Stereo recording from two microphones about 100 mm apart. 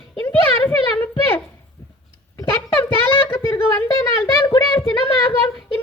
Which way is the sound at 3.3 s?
25° left (ahead or behind).